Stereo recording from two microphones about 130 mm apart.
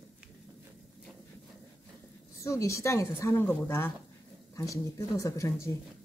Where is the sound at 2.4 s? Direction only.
25° left (ahead or behind).